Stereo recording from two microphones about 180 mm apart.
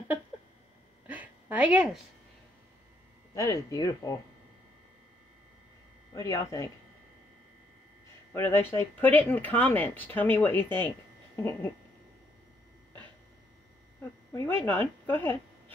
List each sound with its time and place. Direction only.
1.0 s a sound: 10° right (ahead or behind)
3.3 s speech: 20° left (ahead or behind)
6.1 s speech: 15° left (ahead or behind)
8.3 s speech: 15° left (ahead or behind)
14.3 s speech: 10° left (ahead or behind)